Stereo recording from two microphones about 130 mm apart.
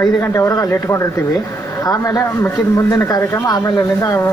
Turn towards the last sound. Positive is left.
turn(degrees=25)  # may be behind; listen again after turning